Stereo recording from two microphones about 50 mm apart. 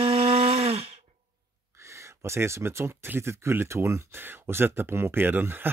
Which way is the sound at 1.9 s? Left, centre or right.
Right.